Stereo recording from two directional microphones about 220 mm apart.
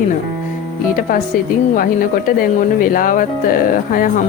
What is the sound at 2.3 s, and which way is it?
Speech, 40° left (ahead or behind).